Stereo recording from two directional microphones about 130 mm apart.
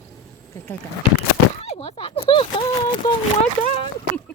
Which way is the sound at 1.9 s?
45° left (ahead or behind).